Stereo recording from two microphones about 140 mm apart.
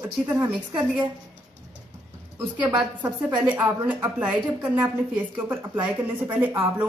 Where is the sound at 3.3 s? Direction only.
10° right (ahead or behind).